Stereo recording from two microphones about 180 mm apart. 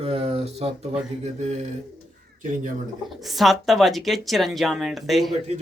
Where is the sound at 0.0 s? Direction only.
30° right (ahead or behind).